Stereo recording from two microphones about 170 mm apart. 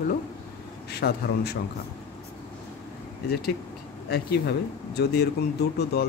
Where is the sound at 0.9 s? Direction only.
75° left (ahead or behind).